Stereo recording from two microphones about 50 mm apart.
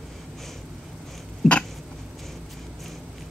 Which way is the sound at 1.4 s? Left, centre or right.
Centre.